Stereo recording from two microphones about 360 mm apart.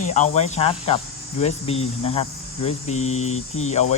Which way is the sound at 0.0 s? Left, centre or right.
Centre.